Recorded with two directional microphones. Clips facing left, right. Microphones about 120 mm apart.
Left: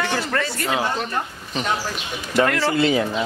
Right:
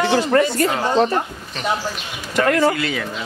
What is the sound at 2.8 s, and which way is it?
Speech, 25° left (ahead or behind).